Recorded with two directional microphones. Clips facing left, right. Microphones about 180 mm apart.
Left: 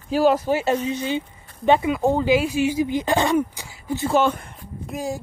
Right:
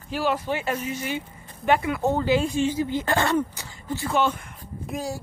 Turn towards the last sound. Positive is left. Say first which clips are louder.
# left 1 dB
turn(degrees=0)  # may be behind; listen again after turning